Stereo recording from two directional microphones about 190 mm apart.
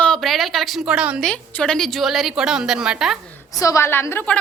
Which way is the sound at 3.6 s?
15° left (ahead or behind).